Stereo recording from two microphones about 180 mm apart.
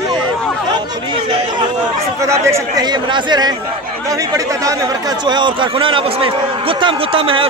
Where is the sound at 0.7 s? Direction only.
25° right (ahead or behind).